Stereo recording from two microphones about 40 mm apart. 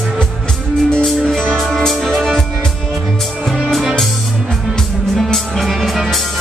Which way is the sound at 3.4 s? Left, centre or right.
Centre.